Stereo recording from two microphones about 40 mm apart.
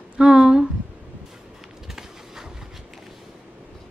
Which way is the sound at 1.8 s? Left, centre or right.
Centre.